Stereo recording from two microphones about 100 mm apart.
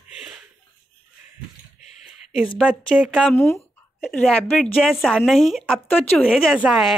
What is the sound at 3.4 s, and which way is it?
Speech, 25° left (ahead or behind).